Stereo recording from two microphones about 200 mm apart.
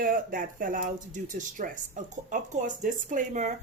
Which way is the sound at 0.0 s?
45° right (ahead or behind).